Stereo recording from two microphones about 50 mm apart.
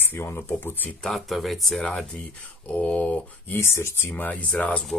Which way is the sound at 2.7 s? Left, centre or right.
Left.